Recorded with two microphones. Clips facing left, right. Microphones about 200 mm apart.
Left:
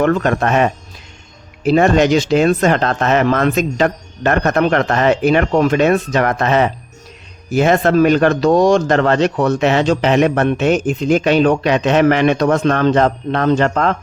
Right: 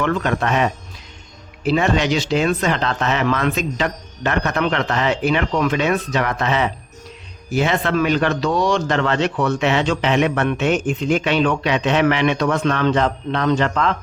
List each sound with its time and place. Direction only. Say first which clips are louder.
0.0 s speech: left 5 dB; 45° left (ahead or behind)